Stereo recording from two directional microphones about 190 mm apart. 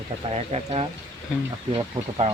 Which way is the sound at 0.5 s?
30° right (ahead or behind).